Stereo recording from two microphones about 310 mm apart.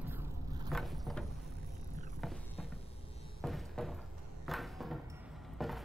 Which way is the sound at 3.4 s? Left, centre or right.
Centre.